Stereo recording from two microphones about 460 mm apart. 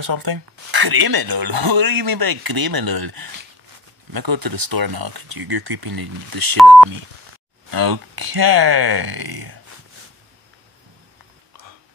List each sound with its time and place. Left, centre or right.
0.0 s speech: right
7.7 s speech: right